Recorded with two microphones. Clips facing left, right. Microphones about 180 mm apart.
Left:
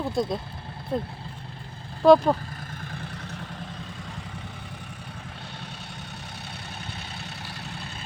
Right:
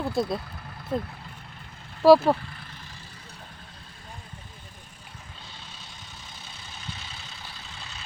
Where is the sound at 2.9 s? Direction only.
60° left (ahead or behind).